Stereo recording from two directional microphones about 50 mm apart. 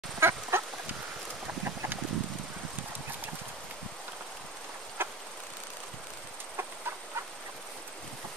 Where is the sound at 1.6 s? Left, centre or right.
Right.